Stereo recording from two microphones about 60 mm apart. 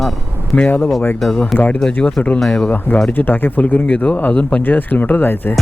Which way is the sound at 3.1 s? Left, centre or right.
Left.